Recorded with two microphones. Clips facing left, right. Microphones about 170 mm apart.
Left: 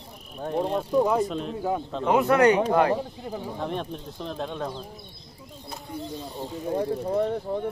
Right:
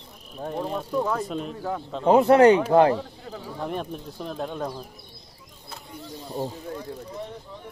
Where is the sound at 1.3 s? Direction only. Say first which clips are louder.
Even; centre (ahead or behind).